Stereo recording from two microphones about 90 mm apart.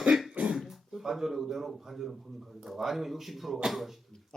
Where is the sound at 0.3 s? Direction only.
15° right (ahead or behind).